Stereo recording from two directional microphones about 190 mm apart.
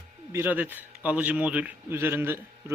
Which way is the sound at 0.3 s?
10° right (ahead or behind).